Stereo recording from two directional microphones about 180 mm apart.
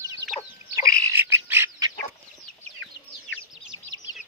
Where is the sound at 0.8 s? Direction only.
15° right (ahead or behind).